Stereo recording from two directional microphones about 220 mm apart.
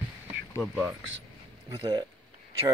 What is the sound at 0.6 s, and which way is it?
Speech, centre (ahead or behind).